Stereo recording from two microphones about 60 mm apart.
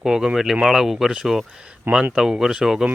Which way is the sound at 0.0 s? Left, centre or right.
Centre.